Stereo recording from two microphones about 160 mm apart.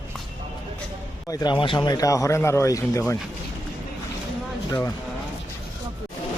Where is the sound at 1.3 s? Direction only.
25° left (ahead or behind).